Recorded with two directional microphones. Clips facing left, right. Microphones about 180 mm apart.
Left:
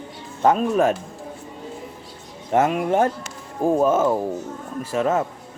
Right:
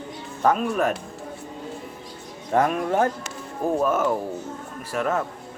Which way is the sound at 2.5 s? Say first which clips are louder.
Left 2 dB; 20° left (ahead or behind).